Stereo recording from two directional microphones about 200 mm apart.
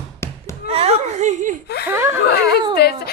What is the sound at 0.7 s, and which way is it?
Chuckle, 30° right (ahead or behind).